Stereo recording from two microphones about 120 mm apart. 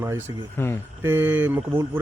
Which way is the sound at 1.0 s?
20° right (ahead or behind).